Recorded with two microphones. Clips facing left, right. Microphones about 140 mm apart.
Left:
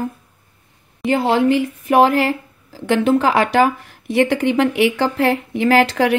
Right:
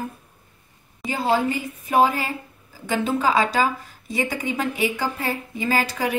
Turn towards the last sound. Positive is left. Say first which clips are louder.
# left 9 dB
turn(degrees=75)  # may be behind; listen again after turning